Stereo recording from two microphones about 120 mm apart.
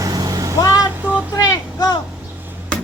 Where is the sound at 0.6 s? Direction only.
30° left (ahead or behind).